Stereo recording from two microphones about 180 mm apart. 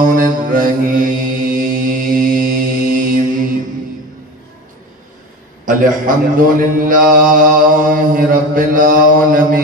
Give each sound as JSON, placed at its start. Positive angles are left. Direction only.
{"t": 0.0, "sound": "mantra", "side_deg": -50}
{"t": 5.7, "sound": "mantra", "side_deg": -50}